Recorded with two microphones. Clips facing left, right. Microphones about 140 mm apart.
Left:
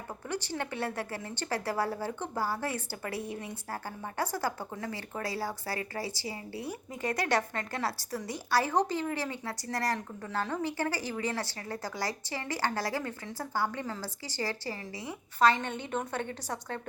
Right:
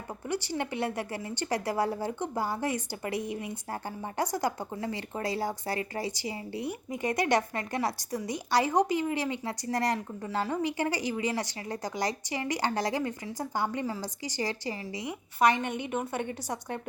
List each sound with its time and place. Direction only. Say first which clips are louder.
0.3 s a woman's voice: right 3 dB; 10° right (ahead or behind)